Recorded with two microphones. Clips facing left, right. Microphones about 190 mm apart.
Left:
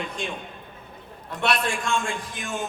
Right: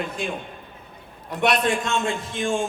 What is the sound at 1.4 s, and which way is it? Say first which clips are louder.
A man's voice: right 4 dB; 20° right (ahead or behind).